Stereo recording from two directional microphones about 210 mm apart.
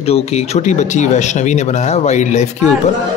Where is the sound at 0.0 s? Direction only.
30° left (ahead or behind).